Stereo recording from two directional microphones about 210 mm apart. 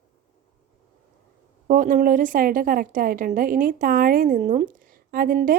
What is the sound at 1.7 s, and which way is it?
A woman's voice, 40° right (ahead or behind).